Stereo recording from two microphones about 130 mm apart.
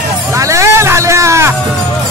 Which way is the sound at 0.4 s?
25° right (ahead or behind).